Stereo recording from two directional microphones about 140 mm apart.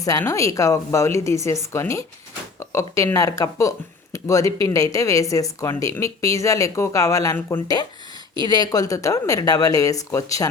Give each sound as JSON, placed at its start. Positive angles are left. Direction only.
{"t": 0.0, "sound": "a woman's voice", "side_deg": 25}
{"t": 8.4, "sound": "a woman's voice", "side_deg": 30}